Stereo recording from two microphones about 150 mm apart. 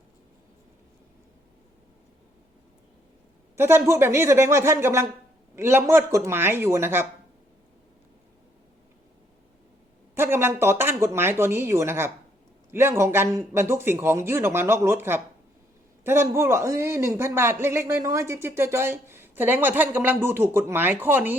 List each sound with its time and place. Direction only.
3.5 s a man's voice: 15° right (ahead or behind)
10.2 s a man's voice: 15° right (ahead or behind)